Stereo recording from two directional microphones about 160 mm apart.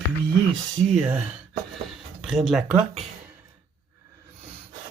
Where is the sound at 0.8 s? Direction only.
5° right (ahead or behind).